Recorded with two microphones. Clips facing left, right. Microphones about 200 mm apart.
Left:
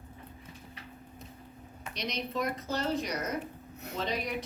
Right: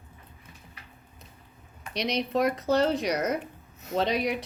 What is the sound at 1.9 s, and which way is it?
Speech, 80° right.